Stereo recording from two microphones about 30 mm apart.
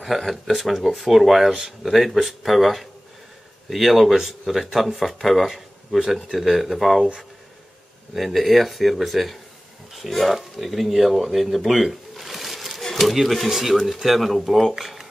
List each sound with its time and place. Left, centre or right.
0.2 s speech: centre
1.5 s speech: right
1.9 s speech: centre
8.1 s speech: centre
11.8 s a sound: centre
13.1 s speech: centre
14.0 s speech: centre
14.8 s a sound: centre